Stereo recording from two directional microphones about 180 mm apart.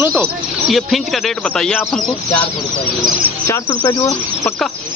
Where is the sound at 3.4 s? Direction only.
20° left (ahead or behind).